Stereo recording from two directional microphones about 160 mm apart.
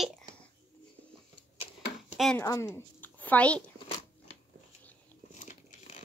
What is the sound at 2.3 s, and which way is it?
A woman's voice, 20° left (ahead or behind).